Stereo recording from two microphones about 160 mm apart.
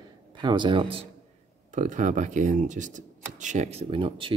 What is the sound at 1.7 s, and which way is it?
Speech, 50° right (ahead or behind).